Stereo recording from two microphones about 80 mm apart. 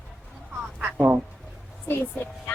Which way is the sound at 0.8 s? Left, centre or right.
Right.